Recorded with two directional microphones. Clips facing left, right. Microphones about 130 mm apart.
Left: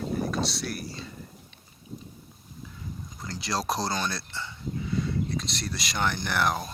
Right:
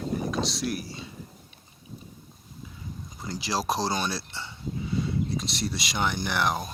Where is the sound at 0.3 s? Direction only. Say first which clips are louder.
Right 2 dB; centre (ahead or behind).